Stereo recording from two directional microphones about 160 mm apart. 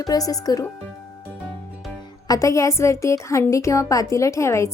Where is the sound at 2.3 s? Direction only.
20° left (ahead or behind).